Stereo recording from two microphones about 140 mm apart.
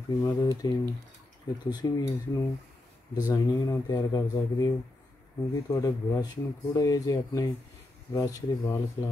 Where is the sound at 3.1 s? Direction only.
25° left (ahead or behind).